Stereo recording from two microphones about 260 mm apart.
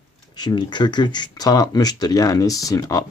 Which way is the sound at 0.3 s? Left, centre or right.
Centre.